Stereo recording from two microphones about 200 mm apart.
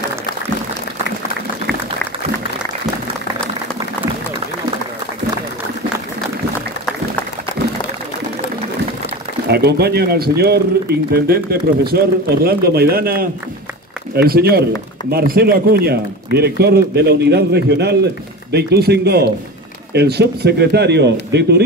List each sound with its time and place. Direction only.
9.5 s speech: 55° right (ahead or behind)